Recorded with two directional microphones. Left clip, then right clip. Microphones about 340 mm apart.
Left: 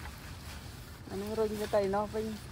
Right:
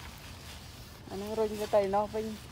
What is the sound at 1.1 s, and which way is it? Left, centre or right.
Speech, right.